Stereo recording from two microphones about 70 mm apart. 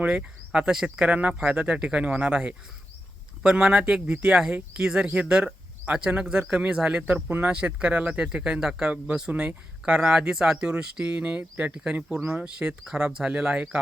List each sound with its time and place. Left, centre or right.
0.0 s speech: centre
7.0 s speech: right
7.4 s speech: centre